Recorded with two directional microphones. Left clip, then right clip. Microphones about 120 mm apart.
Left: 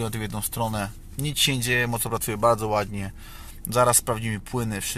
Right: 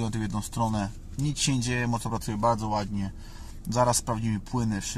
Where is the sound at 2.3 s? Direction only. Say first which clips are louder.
Left 5 dB; 25° left (ahead or behind).